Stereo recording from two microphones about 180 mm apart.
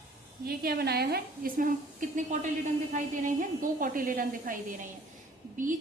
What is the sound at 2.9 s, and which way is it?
A woman's voice, 45° right (ahead or behind).